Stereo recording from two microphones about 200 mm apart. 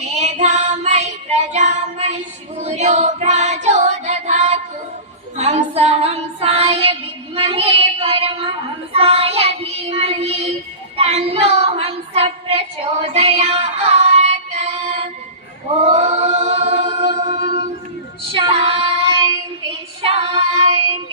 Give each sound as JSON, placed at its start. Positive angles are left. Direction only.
{"t": 0.1, "sound": "child singing", "side_deg": -35}
{"t": 5.4, "sound": "female singing", "side_deg": -35}
{"t": 7.3, "sound": "child singing", "side_deg": -30}
{"t": 10.9, "sound": "a sound", "side_deg": -30}
{"t": 15.7, "sound": "singing", "side_deg": -35}
{"t": 18.3, "sound": "child singing", "side_deg": -25}
{"t": 20.0, "sound": "female singing", "side_deg": -30}